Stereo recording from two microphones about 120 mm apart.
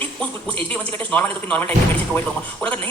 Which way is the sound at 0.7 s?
15° left (ahead or behind).